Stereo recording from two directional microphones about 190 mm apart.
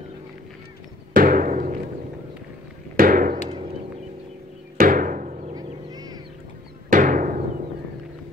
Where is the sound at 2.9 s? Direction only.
45° right (ahead or behind).